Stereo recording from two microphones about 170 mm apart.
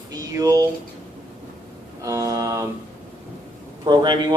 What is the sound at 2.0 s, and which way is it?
Speech, 20° right (ahead or behind).